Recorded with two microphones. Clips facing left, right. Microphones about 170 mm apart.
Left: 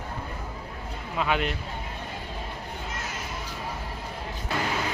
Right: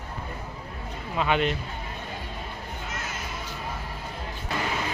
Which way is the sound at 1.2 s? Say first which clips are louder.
Right 2 dB; 5° left (ahead or behind).